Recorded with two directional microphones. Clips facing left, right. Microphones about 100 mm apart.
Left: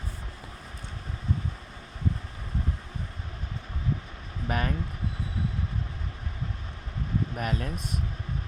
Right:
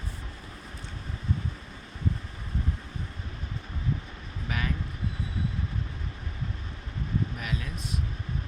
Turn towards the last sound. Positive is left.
turn(degrees=45)  # may be behind; listen again after turning